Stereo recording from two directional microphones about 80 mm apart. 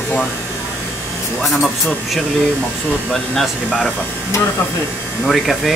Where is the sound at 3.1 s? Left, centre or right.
Centre.